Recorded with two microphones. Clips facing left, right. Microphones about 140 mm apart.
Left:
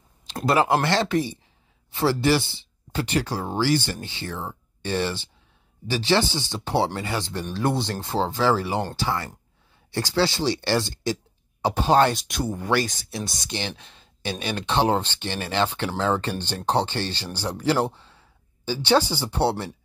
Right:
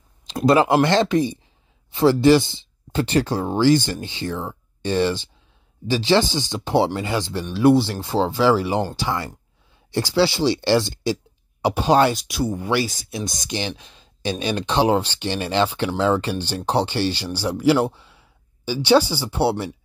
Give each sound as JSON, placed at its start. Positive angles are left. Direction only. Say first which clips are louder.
{"t": 0.3, "sound": "speech", "louder": "right 4 dB", "side_deg": -20}
{"t": 8.0, "sound": "speech", "louder": "right 4 dB", "side_deg": 20}
{"t": 8.4, "sound": "speech", "louder": "right 4 dB", "side_deg": -15}
{"t": 12.1, "sound": "speech", "louder": "right 4 dB", "side_deg": 0}
{"t": 17.8, "sound": "a sound", "louder": "right 3 dB", "side_deg": -10}
{"t": 18.7, "sound": "speech", "louder": "right 4 dB", "side_deg": -10}